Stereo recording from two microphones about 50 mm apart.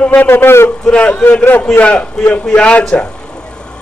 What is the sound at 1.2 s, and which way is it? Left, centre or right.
Speech, left.